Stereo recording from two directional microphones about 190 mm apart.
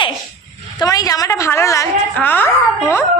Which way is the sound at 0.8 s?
20° left (ahead or behind).